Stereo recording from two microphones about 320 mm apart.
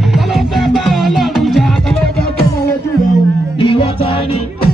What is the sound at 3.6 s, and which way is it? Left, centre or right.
Music, centre.